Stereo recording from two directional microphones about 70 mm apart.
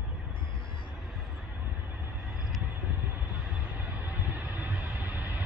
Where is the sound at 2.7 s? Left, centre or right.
Right.